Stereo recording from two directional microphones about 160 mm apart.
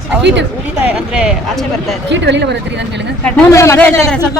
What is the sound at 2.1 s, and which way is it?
Speech, 90° right.